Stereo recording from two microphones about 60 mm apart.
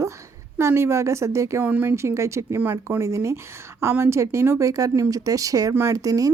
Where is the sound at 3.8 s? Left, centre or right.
Right.